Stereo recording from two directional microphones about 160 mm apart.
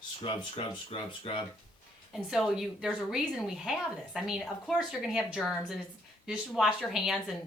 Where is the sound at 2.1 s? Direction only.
Centre (ahead or behind).